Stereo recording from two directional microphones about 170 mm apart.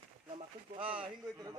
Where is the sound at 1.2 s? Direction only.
20° right (ahead or behind).